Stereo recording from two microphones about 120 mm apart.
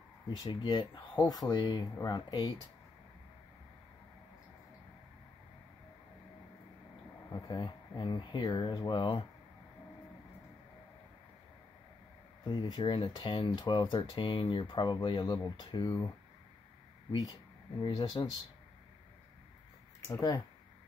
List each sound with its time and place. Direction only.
0.4 s speech: 35° left (ahead or behind)
7.4 s speech: 40° left (ahead or behind)
12.4 s speech: 40° left (ahead or behind)
15.8 s speech: 25° left (ahead or behind)
17.1 s speech: 30° left (ahead or behind)
20.1 s speech: 25° left (ahead or behind)